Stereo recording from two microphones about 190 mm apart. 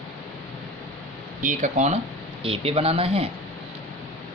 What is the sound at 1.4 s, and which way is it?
Speech, 40° right (ahead or behind).